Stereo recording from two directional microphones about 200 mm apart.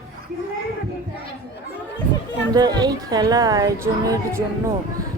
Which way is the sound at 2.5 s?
20° right (ahead or behind).